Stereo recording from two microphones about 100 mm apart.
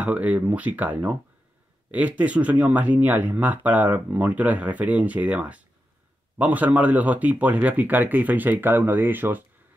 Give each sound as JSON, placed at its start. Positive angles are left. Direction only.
{"t": 0.0, "sound": "speech", "side_deg": -15}